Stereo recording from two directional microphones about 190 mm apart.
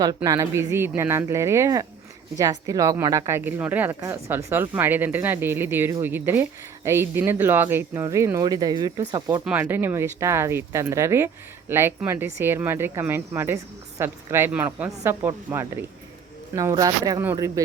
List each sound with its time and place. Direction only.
0.3 s speech: 15° right (ahead or behind)
9.4 s speech: 10° right (ahead or behind)